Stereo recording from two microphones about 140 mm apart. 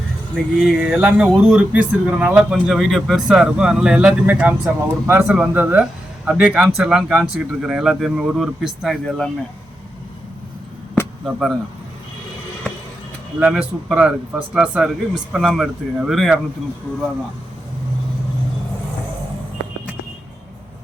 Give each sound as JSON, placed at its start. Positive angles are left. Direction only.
{"t": 0.5, "sound": "speech", "side_deg": 0}
{"t": 11.3, "sound": "speech", "side_deg": 0}
{"t": 13.4, "sound": "speech", "side_deg": -5}